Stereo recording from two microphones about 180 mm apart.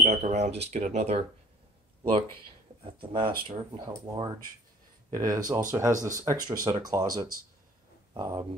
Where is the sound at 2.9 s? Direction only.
30° right (ahead or behind).